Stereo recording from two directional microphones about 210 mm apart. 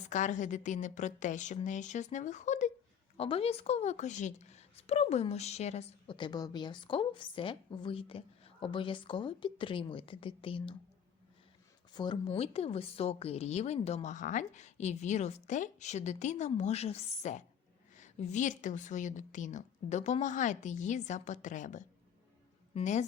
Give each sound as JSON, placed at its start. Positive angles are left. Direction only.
{"t": 0.1, "sound": "a woman's voice", "side_deg": 35}
{"t": 11.9, "sound": "speech", "side_deg": 20}